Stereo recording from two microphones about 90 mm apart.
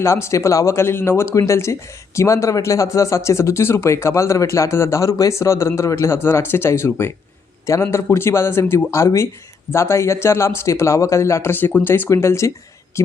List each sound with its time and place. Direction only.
0.0 s a man's voice: 30° left (ahead or behind)